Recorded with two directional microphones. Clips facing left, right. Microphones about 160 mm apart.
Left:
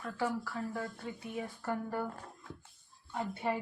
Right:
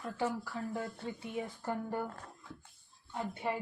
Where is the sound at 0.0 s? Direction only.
20° right (ahead or behind).